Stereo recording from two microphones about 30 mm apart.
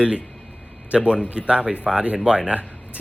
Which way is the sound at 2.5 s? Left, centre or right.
Right.